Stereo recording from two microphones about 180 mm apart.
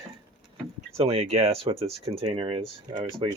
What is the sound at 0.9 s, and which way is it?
Speech, 35° right (ahead or behind).